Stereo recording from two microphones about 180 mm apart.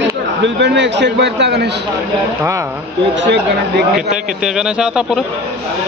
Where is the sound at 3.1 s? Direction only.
75° right (ahead or behind).